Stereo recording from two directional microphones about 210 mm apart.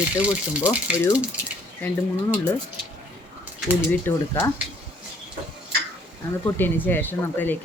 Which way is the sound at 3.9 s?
10° left (ahead or behind).